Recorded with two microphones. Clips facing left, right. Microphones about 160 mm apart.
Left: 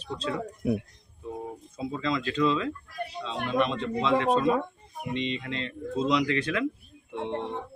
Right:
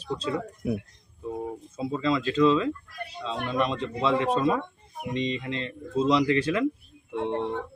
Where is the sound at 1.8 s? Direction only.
30° right (ahead or behind).